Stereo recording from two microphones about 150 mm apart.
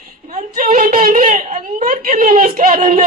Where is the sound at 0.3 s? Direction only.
60° right (ahead or behind).